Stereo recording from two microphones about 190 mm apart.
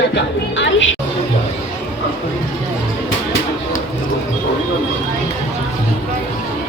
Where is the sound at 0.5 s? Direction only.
80° left.